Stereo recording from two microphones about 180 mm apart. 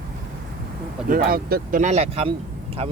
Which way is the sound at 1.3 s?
55° right (ahead or behind).